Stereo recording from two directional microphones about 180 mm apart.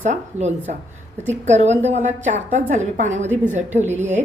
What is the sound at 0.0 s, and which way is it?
A woman's voice, 40° right (ahead or behind).